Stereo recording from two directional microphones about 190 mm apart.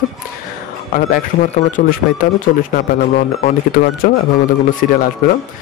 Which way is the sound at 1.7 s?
45° left (ahead or behind).